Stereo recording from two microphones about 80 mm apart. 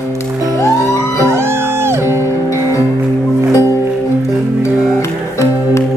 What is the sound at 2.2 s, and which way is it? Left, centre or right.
Music, left.